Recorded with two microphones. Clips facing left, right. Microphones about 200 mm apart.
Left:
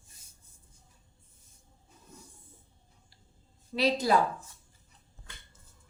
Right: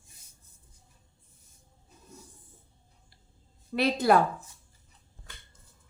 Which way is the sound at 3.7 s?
55° right (ahead or behind).